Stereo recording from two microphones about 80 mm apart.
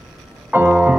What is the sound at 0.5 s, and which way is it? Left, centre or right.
Music, centre.